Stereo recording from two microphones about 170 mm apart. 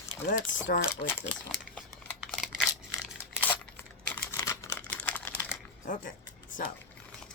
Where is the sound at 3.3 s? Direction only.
10° left (ahead or behind).